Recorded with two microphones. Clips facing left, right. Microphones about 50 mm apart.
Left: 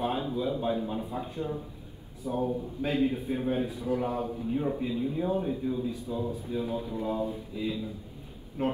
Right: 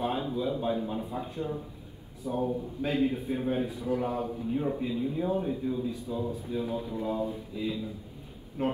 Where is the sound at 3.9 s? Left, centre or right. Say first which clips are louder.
Even; centre.